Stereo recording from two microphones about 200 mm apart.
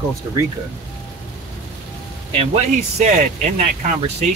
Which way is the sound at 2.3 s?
30° right (ahead or behind).